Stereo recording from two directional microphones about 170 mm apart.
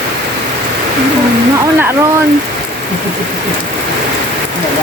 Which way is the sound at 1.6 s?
15° right (ahead or behind).